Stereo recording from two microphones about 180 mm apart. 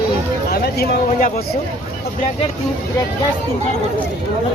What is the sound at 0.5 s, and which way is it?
Speech, 60° left (ahead or behind).